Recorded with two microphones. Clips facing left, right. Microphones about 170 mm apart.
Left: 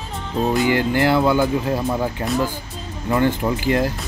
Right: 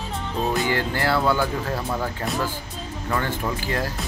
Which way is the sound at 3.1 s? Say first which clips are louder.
Left 7 dB; 20° left (ahead or behind).